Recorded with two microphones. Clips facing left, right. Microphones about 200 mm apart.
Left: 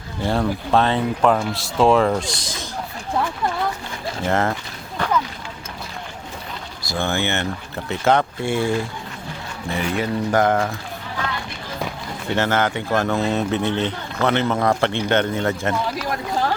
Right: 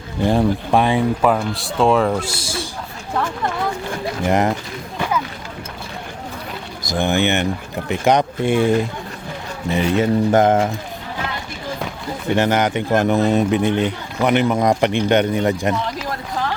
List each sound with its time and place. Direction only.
0.2 s speech: 15° right (ahead or behind)
4.3 s speech: 15° right (ahead or behind)
4.9 s a sound: 10° right (ahead or behind)
6.8 s speech: 15° right (ahead or behind)
12.4 s speech: 15° right (ahead or behind)